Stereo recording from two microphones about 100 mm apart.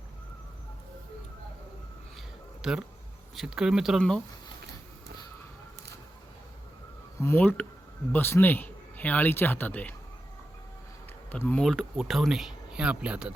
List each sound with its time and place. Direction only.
2.6 s speech: 5° right (ahead or behind)
7.2 s a man's voice: 25° left (ahead or behind)
11.3 s speech: 15° left (ahead or behind)
11.6 s speech: centre (ahead or behind)